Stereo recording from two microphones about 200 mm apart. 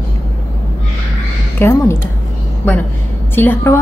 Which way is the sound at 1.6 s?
10° left (ahead or behind).